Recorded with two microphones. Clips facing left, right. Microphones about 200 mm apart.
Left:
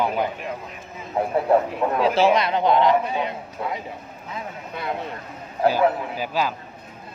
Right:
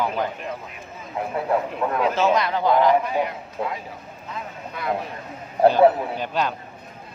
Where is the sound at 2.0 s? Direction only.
30° left (ahead or behind).